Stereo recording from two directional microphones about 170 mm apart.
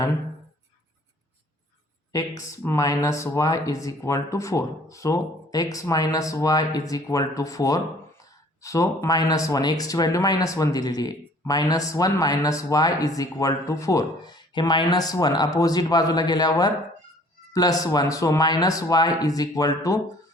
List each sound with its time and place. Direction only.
2.4 s speech: 20° left (ahead or behind)